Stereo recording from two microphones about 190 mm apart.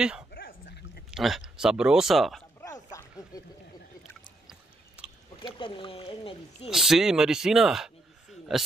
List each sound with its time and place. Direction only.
0.3 s dog: 50° left (ahead or behind)
1.1 s speech: centre (ahead or behind)
2.6 s a sound: 15° left (ahead or behind)
4.5 s chewing: 5° right (ahead or behind)
5.4 s speech: 25° left (ahead or behind)
6.7 s a man's voice: centre (ahead or behind)